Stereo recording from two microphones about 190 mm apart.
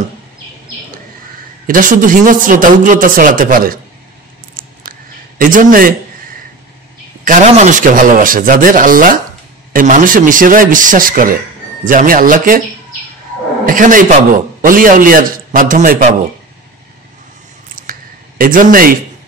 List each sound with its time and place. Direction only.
1.7 s a man's voice: 45° right (ahead or behind)
5.4 s a man's voice: 45° right (ahead or behind)
7.2 s a man's voice: 40° right (ahead or behind)
13.7 s a man's voice: 45° right (ahead or behind)
17.8 s a sound: 45° right (ahead or behind)
18.4 s a man's voice: 45° right (ahead or behind)